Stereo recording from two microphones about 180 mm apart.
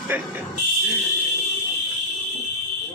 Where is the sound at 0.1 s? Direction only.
10° right (ahead or behind).